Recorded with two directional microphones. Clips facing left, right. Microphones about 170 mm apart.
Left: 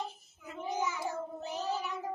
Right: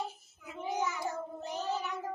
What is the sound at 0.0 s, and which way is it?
Child singing, 5° right (ahead or behind).